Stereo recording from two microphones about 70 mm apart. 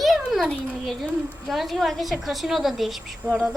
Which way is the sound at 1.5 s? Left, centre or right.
Centre.